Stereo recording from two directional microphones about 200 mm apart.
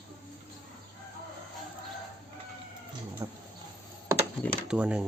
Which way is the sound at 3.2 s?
15° right (ahead or behind).